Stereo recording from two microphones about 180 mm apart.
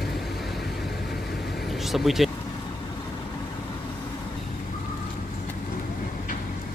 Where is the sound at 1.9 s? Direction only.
Centre (ahead or behind).